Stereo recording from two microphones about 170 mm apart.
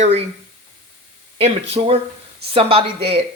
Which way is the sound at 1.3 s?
35° right (ahead or behind).